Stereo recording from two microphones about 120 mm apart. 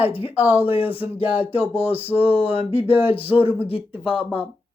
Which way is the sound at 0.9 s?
15° right (ahead or behind).